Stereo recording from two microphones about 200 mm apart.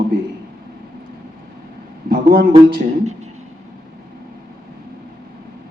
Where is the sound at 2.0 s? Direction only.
50° right (ahead or behind).